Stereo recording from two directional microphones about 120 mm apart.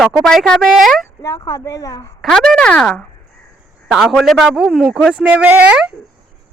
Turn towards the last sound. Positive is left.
turn(degrees=-10)  # may be behind; listen again after turning